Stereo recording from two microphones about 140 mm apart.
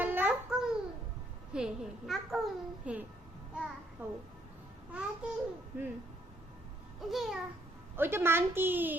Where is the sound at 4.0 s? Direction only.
15° right (ahead or behind).